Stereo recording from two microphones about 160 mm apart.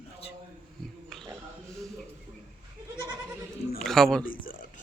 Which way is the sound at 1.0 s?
Centre (ahead or behind).